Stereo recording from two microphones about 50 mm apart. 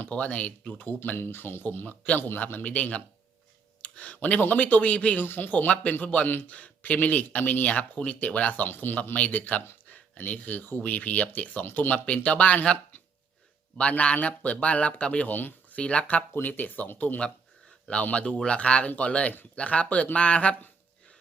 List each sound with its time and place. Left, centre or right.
0.0 s speech: left
1.1 s speech: left
2.7 s speech: left
5.2 s speech: left
8.7 s speech: left
9.1 s speech: left
15.3 s speech: left
15.7 s speech: left
16.3 s speech: left
18.0 s speech: left